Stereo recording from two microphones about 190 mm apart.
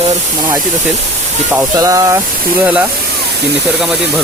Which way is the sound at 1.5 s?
15° right (ahead or behind).